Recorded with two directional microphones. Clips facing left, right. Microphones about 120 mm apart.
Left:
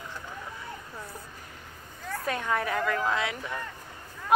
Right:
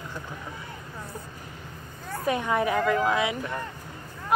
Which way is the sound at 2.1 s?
10° right (ahead or behind).